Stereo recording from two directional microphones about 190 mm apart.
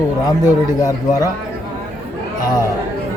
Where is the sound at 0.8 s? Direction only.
15° left (ahead or behind).